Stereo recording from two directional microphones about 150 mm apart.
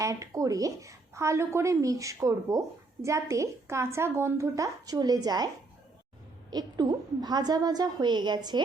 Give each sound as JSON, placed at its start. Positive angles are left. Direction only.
{"t": 0.0, "sound": "a woman's voice", "side_deg": -20}
{"t": 6.5, "sound": "a woman's voice", "side_deg": -25}